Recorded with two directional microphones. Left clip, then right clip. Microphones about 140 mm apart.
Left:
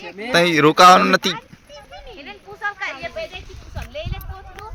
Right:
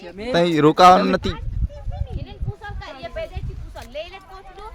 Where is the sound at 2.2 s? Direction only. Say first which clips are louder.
Left 13 dB; 40° right (ahead or behind).